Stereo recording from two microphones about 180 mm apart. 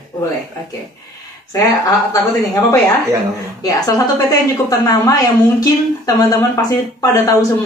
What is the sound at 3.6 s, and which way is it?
A woman's voice, 20° left (ahead or behind).